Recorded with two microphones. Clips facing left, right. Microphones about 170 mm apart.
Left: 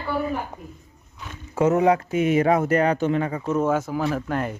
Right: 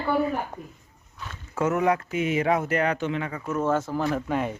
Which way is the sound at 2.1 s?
45° left (ahead or behind).